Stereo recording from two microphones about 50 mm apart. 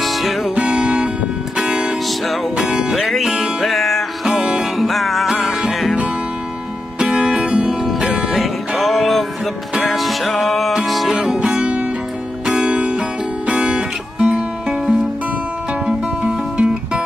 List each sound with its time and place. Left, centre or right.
0.0 s music: centre
0.6 s music: centre
3.0 s music: centre
4.4 s music: centre
4.7 s music: centre
7.0 s music: centre
8.4 s music: centre
11.4 s music: centre
14.2 s music: centre
16.2 s music: right